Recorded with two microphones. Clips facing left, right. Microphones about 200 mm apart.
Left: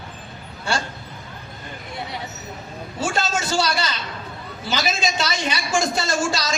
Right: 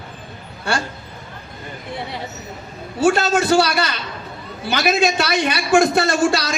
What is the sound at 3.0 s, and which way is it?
A man's voice, 60° right (ahead or behind).